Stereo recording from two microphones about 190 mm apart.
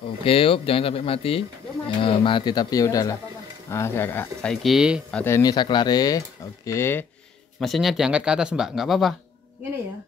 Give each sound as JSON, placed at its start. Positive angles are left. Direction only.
{"t": 0.2, "sound": "speech", "side_deg": 30}
{"t": 5.1, "sound": "speech", "side_deg": 15}
{"t": 7.6, "sound": "speech", "side_deg": 0}